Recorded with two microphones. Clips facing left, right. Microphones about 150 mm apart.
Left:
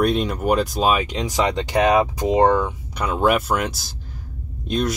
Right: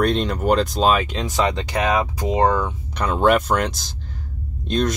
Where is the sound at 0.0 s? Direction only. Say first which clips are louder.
Even; 10° left (ahead or behind).